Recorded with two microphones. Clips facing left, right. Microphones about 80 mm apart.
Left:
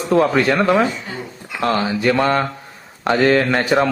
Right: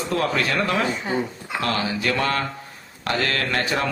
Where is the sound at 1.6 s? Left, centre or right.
Left.